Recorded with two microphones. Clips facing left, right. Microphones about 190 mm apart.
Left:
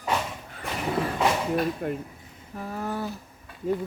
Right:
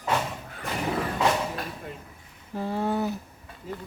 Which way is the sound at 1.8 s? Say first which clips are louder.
Left 10 dB; 60° left (ahead or behind).